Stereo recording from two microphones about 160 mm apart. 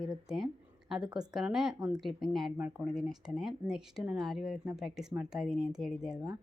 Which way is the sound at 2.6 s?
10° right (ahead or behind).